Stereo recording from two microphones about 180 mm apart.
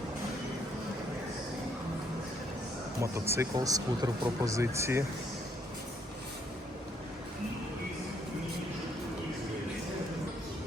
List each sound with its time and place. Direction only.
3.0 s speech: 15° right (ahead or behind)